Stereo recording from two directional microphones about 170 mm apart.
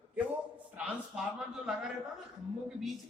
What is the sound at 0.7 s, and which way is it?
Speech, 10° right (ahead or behind).